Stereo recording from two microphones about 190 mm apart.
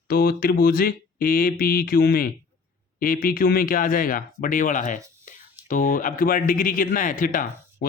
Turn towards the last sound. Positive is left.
turn(degrees=45)  # may be behind; listen again after turning